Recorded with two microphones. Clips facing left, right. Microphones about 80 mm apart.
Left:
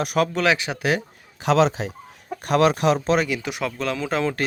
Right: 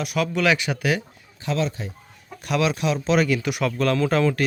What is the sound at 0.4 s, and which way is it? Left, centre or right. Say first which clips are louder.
Speech: even; left.